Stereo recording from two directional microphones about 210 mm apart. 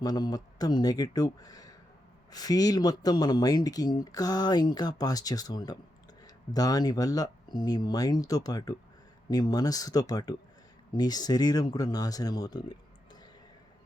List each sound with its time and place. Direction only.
0.0 s speech: 20° left (ahead or behind)